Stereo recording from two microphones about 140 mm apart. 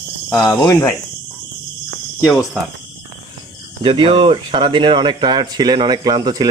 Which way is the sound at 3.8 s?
40° right (ahead or behind).